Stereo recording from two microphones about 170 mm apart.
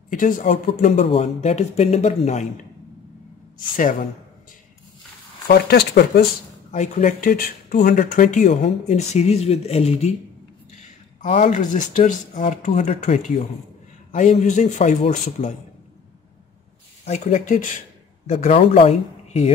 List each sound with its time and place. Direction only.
0.1 s speech: 50° left (ahead or behind)
5.5 s speech: 70° left (ahead or behind)
6.7 s speech: 45° left (ahead or behind)
11.3 s speech: 45° left (ahead or behind)
17.0 s speech: 45° left (ahead or behind)